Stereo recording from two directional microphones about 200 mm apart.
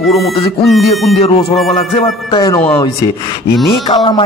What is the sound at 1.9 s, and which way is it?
Speech, 25° left (ahead or behind).